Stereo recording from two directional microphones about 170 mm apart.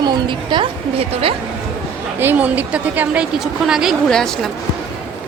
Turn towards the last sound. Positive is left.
turn(degrees=0)  # may be behind; listen again after turning